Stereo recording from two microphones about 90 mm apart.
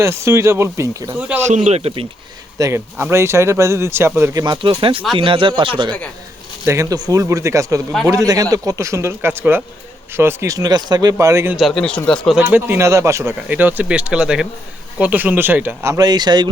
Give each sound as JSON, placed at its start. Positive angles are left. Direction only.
{"t": 0.0, "sound": "a man's voice", "side_deg": -35}
{"t": 2.6, "sound": "a man's voice", "side_deg": -35}
{"t": 4.4, "sound": "speech", "side_deg": -55}
{"t": 6.7, "sound": "a man's voice", "side_deg": -40}
{"t": 10.5, "sound": "speech", "side_deg": -45}
{"t": 11.5, "sound": "speech", "side_deg": 5}
{"t": 12.5, "sound": "speech", "side_deg": -20}
{"t": 13.5, "sound": "speech", "side_deg": -20}
{"t": 16.0, "sound": "speech", "side_deg": -50}